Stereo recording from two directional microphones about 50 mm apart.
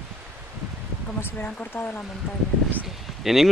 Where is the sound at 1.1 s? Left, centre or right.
Left.